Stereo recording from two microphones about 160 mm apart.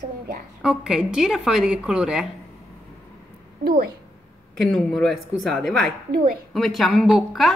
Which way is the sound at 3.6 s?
70° right (ahead or behind).